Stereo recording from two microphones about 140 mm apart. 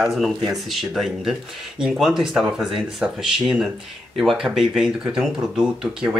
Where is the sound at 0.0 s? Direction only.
Centre (ahead or behind).